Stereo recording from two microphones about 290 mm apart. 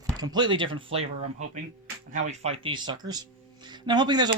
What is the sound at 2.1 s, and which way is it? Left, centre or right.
Speech, right.